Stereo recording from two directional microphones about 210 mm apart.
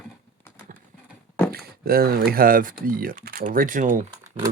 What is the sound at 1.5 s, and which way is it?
Speech, 45° right (ahead or behind).